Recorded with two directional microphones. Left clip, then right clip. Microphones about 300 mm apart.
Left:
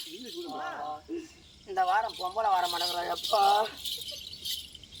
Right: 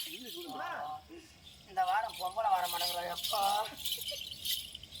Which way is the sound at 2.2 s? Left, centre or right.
Centre.